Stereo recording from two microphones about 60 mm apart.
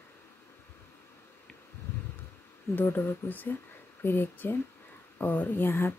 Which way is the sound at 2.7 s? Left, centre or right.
Left.